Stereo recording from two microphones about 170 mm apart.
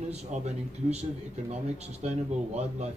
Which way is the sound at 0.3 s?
45° right (ahead or behind).